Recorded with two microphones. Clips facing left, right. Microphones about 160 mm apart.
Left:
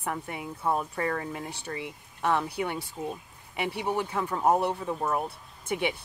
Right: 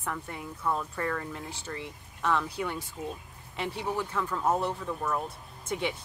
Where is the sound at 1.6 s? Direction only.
60° left (ahead or behind).